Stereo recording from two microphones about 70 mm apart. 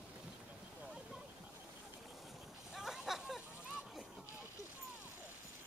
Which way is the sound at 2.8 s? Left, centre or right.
Centre.